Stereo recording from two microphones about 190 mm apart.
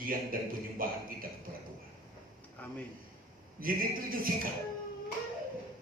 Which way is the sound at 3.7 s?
50° right (ahead or behind).